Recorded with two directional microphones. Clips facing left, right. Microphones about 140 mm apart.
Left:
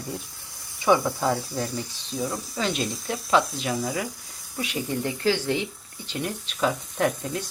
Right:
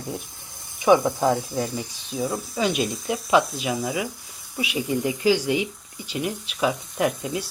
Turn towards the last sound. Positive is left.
turn(degrees=-10)  # may be behind; listen again after turning